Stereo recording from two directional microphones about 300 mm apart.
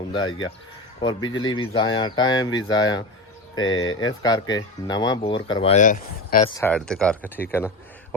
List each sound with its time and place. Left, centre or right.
0.1 s speech: centre
6.5 s speech: centre